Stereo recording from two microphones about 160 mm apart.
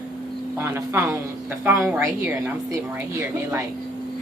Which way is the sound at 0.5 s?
15° right (ahead or behind).